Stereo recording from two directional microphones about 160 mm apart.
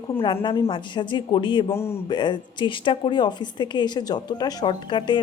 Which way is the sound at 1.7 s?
15° left (ahead or behind).